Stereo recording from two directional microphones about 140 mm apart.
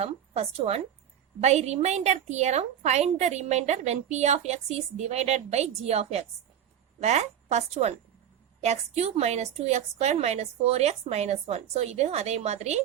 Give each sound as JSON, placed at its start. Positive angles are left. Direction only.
{"t": 0.0, "sound": "a woman's voice", "side_deg": -50}